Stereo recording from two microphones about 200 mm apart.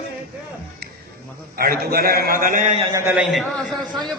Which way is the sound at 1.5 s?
50° right (ahead or behind).